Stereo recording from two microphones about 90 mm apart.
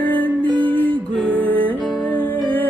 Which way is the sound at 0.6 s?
15° left (ahead or behind).